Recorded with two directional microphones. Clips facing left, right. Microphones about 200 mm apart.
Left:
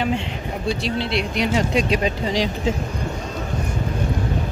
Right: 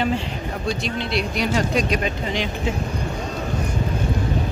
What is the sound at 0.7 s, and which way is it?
Speech, 30° left (ahead or behind).